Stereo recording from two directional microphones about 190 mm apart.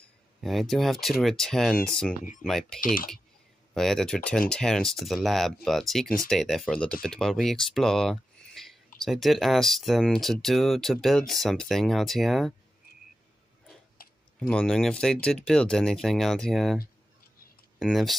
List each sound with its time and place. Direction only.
0.4 s speech: centre (ahead or behind)
2.8 s speech: 45° left (ahead or behind)
3.7 s speech: centre (ahead or behind)
14.0 s typing: 50° left (ahead or behind)
14.5 s speech: 5° left (ahead or behind)